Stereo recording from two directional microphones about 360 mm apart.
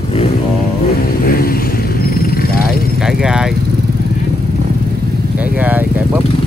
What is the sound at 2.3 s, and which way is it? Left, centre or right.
Vehicle, left.